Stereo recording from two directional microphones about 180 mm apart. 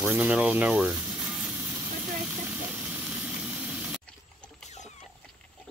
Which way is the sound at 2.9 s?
5° right (ahead or behind).